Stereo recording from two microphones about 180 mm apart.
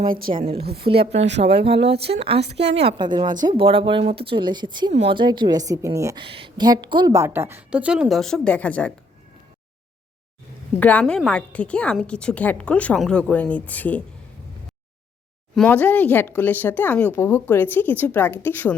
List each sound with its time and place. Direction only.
0.0 s speech: 30° right (ahead or behind)
1.4 s speech: 45° right (ahead or behind)
1.9 s speech: 35° right (ahead or behind)
2.4 s a woman's voice: 70° right (ahead or behind)
3.0 s speech: 25° right (ahead or behind)
6.2 s a woman's voice: 30° right (ahead or behind); by 8.9 s 5° left (ahead or behind)
10.8 s a woman's voice: 10° left (ahead or behind)
15.5 s a woman's voice: 5° left (ahead or behind)